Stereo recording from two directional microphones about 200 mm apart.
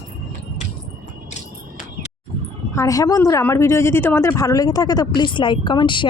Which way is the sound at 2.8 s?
15° left (ahead or behind).